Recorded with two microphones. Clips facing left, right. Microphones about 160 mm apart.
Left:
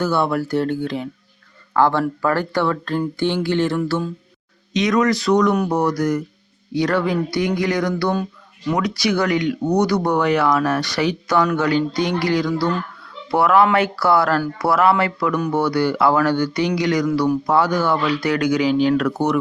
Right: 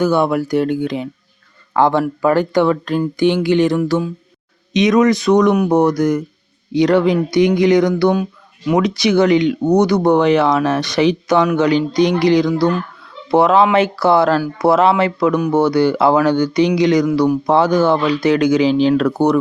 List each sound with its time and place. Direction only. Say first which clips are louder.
0.0 s speech: right 5 dB; 15° right (ahead or behind); by 19.4 s 35° right (ahead or behind)